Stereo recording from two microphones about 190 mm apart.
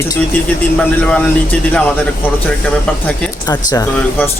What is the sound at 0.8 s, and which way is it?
Speech, 5° left (ahead or behind).